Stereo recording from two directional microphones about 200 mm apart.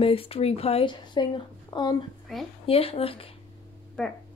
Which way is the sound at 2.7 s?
30° left (ahead or behind).